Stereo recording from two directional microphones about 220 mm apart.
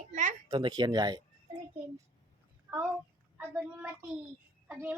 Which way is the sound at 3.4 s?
10° right (ahead or behind).